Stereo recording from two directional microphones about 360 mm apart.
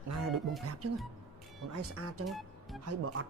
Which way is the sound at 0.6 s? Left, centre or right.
Right.